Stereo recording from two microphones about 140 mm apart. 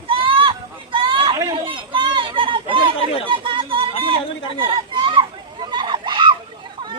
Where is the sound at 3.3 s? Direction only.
40° right (ahead or behind).